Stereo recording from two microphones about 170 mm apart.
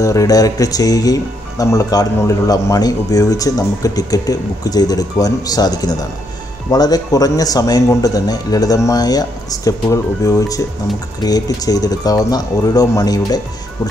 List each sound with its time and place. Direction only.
0.0 s speech: 20° left (ahead or behind)